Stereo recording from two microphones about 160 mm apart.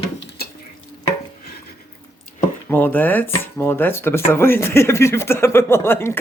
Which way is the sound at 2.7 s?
10° left (ahead or behind).